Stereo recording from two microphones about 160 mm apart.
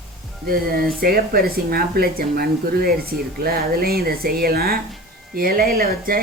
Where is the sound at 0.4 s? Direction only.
65° right (ahead or behind).